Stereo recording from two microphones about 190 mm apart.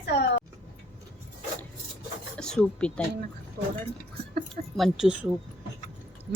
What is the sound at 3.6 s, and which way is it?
Speech, 45° right (ahead or behind).